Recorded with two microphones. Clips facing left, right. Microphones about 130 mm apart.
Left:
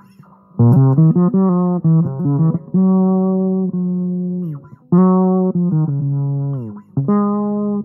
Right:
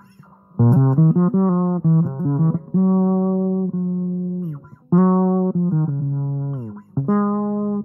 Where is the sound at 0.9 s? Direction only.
45° left (ahead or behind).